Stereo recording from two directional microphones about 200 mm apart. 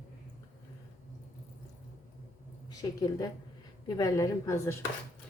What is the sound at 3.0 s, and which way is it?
A woman's voice, 20° left (ahead or behind).